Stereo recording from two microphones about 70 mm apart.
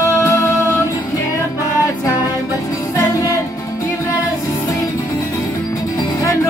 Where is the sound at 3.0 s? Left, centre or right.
Left.